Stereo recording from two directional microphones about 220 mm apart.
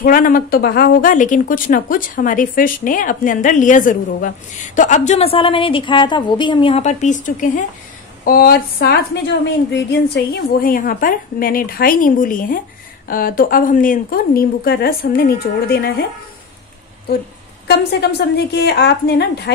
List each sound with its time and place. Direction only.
0.0 s a woman's voice: 40° left (ahead or behind)
17.6 s a woman's voice: 50° left (ahead or behind)